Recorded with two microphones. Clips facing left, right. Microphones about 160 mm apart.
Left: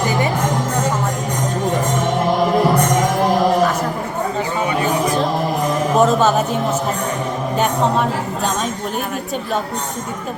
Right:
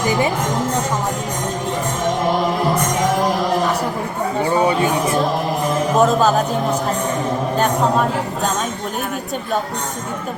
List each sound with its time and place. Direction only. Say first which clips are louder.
6.0 s music: even; centre (ahead or behind)